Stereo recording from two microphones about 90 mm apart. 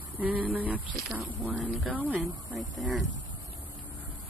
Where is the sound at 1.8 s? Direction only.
20° right (ahead or behind).